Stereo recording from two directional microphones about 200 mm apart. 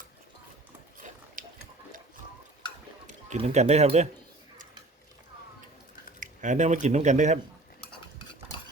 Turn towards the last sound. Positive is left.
turn(degrees=-35)  # may be behind; listen again after turning